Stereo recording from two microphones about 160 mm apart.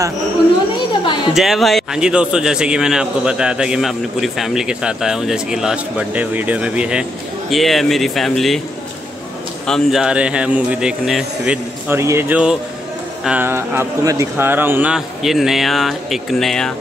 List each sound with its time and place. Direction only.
1.3 s a man's voice: centre (ahead or behind)
9.7 s a man's voice: centre (ahead or behind)